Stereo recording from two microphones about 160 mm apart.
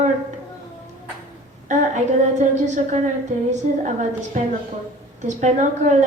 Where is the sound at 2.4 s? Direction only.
50° right (ahead or behind).